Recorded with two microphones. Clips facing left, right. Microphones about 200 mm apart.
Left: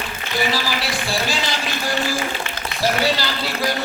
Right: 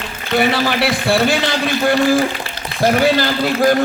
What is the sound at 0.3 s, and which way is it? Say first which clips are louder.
Speech: right 7 dB; 60° right (ahead or behind).